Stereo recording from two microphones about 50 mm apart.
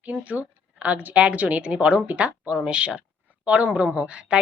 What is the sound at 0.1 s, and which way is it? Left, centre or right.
A woman's voice, right.